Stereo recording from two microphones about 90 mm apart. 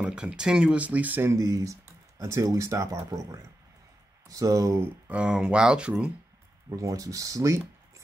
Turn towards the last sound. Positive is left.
turn(degrees=-35)  # may be behind; listen again after turning